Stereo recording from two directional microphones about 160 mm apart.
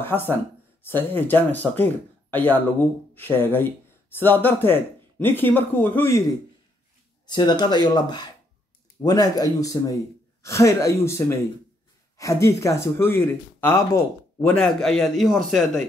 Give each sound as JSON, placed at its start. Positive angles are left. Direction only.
{"t": 0.0, "sound": "speech", "side_deg": 15}
{"t": 7.2, "sound": "speech", "side_deg": 25}